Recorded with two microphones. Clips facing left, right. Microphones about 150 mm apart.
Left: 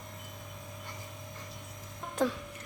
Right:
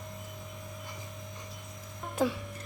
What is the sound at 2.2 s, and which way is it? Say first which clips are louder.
Music: right 1 dB; 5° right (ahead or behind).